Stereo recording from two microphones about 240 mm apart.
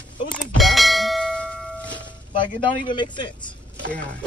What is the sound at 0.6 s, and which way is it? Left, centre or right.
Bell, centre.